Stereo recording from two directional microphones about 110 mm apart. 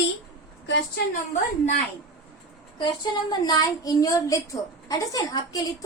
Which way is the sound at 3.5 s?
35° left (ahead or behind).